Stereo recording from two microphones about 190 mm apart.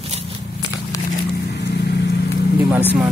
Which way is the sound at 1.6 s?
60° left (ahead or behind).